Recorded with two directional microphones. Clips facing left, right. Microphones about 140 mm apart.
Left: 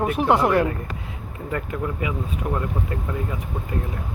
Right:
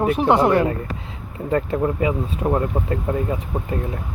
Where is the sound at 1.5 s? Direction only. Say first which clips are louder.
Right 7 dB; 35° right (ahead or behind).